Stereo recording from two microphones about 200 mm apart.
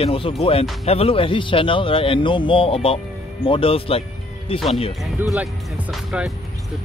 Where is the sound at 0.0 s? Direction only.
30° left (ahead or behind).